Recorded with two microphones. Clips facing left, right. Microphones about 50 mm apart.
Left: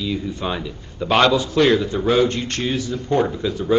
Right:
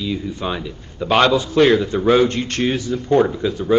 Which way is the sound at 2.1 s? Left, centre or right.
Right.